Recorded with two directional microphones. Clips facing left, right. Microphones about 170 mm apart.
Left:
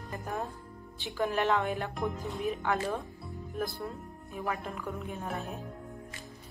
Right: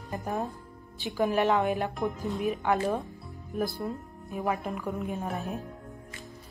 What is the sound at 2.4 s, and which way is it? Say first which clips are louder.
Speech: right 4 dB; 20° right (ahead or behind).